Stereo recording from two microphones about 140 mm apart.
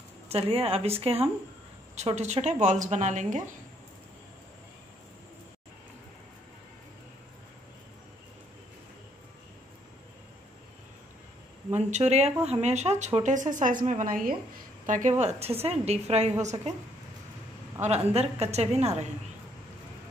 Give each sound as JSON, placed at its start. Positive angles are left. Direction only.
{"t": 0.3, "sound": "a woman's voice", "side_deg": -45}
{"t": 11.7, "sound": "a woman's voice", "side_deg": -55}
{"t": 14.9, "sound": "a woman's voice", "side_deg": -65}
{"t": 17.8, "sound": "a woman's voice", "side_deg": -50}